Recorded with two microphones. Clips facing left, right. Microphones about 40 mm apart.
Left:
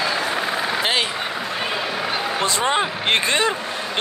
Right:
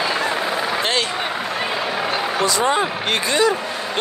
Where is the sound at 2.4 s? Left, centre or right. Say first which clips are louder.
Right 2 dB; left.